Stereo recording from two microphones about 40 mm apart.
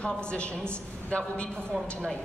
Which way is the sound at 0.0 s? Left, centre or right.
Left.